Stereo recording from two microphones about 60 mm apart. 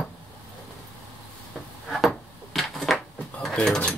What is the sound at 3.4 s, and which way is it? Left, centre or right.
Speech, centre.